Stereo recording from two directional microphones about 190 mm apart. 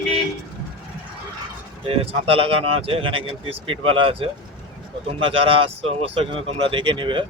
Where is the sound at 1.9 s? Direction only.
30° right (ahead or behind).